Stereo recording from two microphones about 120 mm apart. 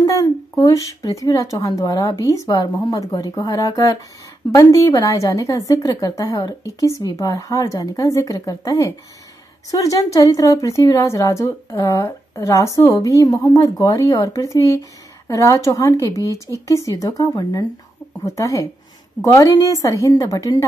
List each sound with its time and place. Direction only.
0.0 s a woman's voice: 30° left (ahead or behind)